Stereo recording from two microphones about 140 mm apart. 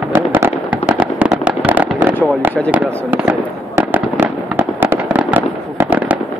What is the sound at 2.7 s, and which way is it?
Fireworks, 15° right (ahead or behind).